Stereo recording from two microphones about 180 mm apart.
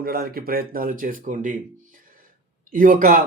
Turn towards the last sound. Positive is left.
turn(degrees=-50)  # may be behind; listen again after turning